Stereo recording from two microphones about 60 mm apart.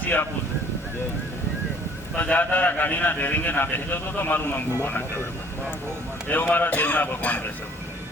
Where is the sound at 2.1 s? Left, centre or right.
Left.